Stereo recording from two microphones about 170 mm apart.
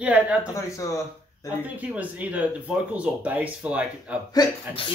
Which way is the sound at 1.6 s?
10° right (ahead or behind).